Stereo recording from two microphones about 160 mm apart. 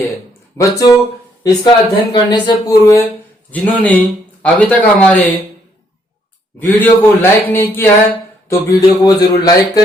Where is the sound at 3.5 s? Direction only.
10° left (ahead or behind).